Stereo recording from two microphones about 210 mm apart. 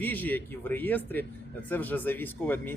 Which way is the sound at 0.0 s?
10° left (ahead or behind).